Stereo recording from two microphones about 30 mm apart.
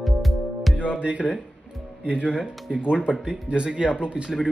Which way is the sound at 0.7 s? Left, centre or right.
Right.